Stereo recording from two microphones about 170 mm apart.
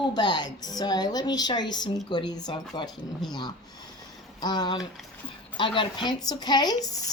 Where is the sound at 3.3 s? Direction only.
25° left (ahead or behind).